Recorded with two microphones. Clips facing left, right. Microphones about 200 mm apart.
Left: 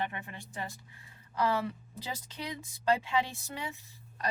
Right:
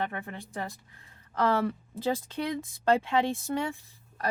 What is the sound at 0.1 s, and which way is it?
Speech, 55° right (ahead or behind).